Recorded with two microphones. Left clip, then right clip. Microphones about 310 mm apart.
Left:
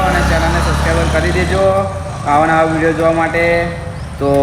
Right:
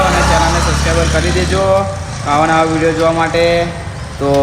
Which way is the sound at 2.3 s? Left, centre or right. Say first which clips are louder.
Even; centre.